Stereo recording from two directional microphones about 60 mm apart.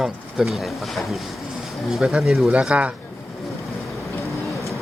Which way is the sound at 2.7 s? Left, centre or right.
Right.